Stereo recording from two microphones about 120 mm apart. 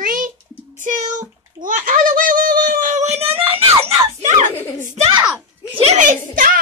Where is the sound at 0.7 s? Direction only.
90° right.